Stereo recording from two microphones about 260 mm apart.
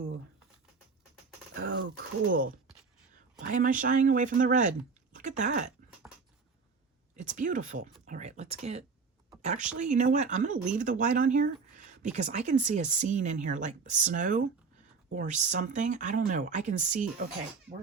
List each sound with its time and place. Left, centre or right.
1.5 s a sound: right
3.5 s speech: right
7.2 s speech: right